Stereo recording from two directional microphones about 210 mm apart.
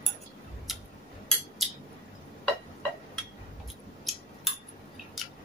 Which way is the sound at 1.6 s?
Centre (ahead or behind).